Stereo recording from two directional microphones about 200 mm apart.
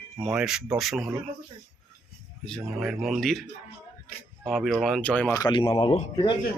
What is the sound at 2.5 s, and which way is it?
Speech, centre (ahead or behind).